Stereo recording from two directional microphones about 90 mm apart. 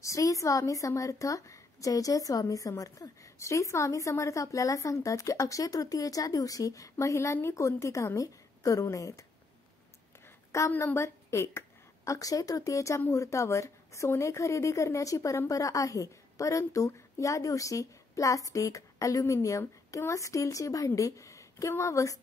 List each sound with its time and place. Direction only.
0.0 s a woman's voice: 35° left (ahead or behind)
10.5 s a woman's voice: 35° left (ahead or behind)